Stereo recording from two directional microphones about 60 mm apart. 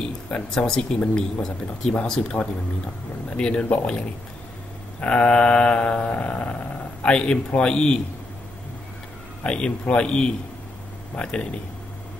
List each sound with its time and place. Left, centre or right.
0.3 s speech: centre
5.0 s speech: centre
9.4 s speech: centre